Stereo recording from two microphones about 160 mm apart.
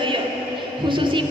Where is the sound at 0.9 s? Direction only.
30° right (ahead or behind).